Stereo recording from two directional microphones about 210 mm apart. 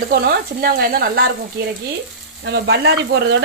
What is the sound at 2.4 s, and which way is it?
Speech, 55° right (ahead or behind).